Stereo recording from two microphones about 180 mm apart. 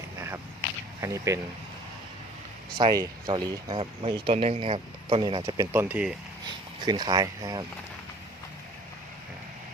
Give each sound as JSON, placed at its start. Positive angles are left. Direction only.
{"t": 1.0, "sound": "speech", "side_deg": -15}
{"t": 2.7, "sound": "speech", "side_deg": -20}
{"t": 5.4, "sound": "speech", "side_deg": -15}
{"t": 6.4, "sound": "speech", "side_deg": -25}